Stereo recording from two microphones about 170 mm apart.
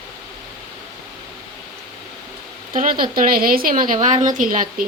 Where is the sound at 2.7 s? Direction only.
55° right (ahead or behind).